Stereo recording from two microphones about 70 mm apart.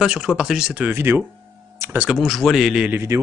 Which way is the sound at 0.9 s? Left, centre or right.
Right.